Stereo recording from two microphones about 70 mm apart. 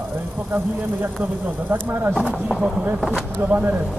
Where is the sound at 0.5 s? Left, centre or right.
Right.